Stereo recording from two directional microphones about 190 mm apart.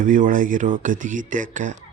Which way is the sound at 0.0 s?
45° right (ahead or behind).